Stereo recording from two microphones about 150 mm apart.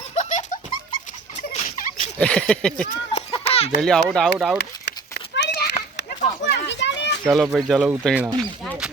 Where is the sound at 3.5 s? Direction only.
40° left (ahead or behind).